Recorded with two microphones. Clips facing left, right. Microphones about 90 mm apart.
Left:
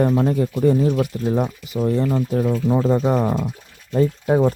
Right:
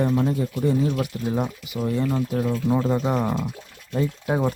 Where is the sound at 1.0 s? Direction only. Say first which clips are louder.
Left 5 dB; 30° left (ahead or behind).